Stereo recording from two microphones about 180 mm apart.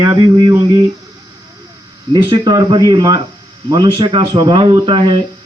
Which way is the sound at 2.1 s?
25° right (ahead or behind).